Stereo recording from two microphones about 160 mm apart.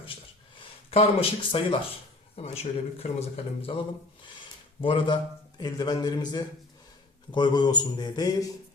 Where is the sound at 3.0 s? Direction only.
40° left (ahead or behind).